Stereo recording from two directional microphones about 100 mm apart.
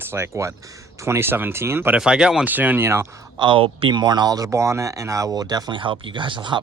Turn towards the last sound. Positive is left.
turn(degrees=-55)  # may be behind; listen again after turning